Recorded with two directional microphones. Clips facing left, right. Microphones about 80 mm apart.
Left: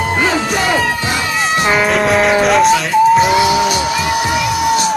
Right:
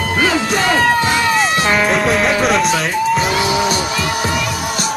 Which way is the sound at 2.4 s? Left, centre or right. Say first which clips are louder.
Left 4 dB; centre.